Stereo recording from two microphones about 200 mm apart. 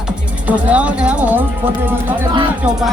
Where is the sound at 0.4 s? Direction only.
5° right (ahead or behind).